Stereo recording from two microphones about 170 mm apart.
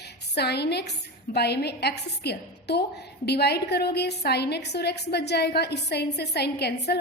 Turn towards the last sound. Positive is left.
turn(degrees=75)  # may be behind; listen again after turning